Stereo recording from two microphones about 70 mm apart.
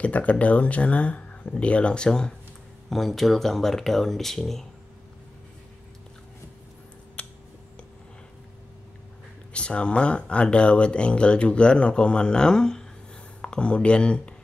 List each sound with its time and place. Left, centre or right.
0.0 s speech: left; by 4.6 s centre
7.2 s a sound: centre
9.5 s speech: centre